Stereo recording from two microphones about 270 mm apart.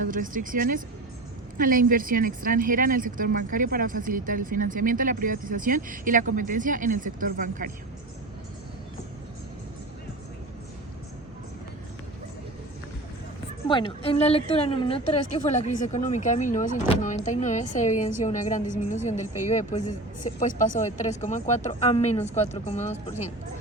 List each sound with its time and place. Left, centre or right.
0.0 s speech: right
13.7 s speech: centre